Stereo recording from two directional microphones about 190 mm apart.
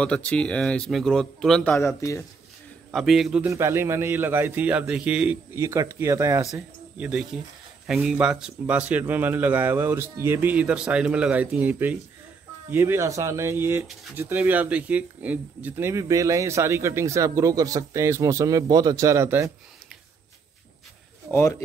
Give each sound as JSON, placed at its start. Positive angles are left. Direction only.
{"t": 0.0, "sound": "speech", "side_deg": 5}
{"t": 2.9, "sound": "speech", "side_deg": 0}
{"t": 3.4, "sound": "speech", "side_deg": -15}
{"t": 6.4, "sound": "speech", "side_deg": -5}
{"t": 21.3, "sound": "speech", "side_deg": 15}